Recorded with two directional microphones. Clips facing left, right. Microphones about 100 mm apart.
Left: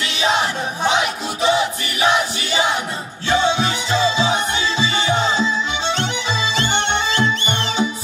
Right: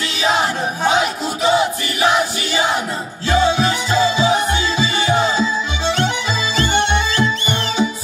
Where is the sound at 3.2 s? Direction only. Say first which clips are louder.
Right 2 dB; 25° left (ahead or behind).